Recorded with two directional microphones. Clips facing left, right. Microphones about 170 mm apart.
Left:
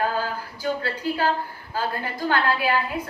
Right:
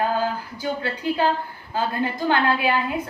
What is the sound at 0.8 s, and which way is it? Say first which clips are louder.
A woman's voice: right 2 dB; 20° right (ahead or behind).